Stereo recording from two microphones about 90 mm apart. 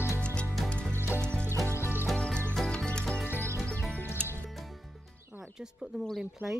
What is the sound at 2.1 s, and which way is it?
Music, 15° left (ahead or behind).